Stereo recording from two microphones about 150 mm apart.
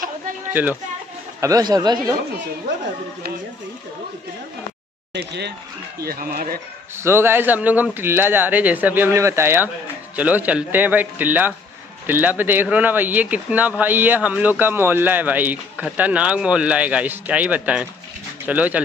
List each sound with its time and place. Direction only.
0.5 s speech: 10° right (ahead or behind)
1.4 s a man's voice: 25° right (ahead or behind)
5.9 s speech: 85° right
7.0 s speech: 15° right (ahead or behind)